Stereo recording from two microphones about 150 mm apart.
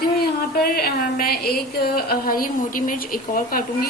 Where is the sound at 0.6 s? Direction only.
80° left.